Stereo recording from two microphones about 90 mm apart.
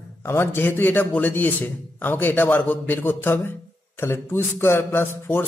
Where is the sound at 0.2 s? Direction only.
25° left (ahead or behind).